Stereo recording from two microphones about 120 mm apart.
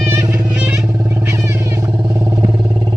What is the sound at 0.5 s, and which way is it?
Vehicle, 10° right (ahead or behind).